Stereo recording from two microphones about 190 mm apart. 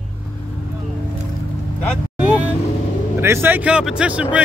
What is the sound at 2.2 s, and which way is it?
Vehicle, 10° right (ahead or behind).